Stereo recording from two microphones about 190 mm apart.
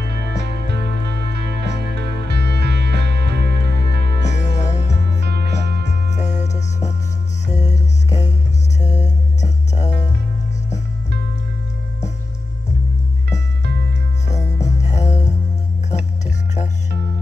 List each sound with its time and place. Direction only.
0.0 s music: 60° right (ahead or behind)
4.2 s music: 40° left (ahead or behind)
5.2 s music: 60° right (ahead or behind)
6.0 s music: 40° left (ahead or behind)
13.7 s music: 60° right (ahead or behind)
14.7 s music: 35° left (ahead or behind)